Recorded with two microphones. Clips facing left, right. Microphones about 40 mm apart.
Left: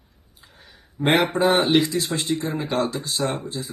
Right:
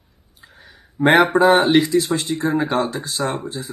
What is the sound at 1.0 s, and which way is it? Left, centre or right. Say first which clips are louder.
Speech: right 6 dB; right.